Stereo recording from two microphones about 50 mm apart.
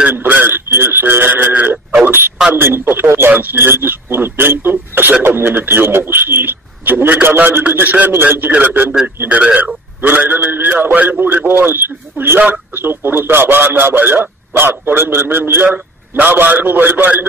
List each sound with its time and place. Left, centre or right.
0.1 s a man's voice: right
2.0 s a man's voice: right
10.0 s a man's voice: right